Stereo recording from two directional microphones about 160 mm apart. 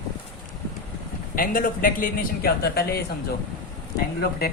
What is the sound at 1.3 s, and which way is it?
A man's voice, 60° left (ahead or behind).